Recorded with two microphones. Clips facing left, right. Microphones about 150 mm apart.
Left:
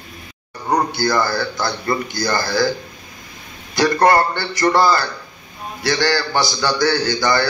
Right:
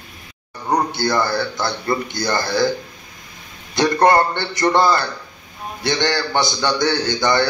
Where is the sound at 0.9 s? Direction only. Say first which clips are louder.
Left 1 dB; 20° right (ahead or behind).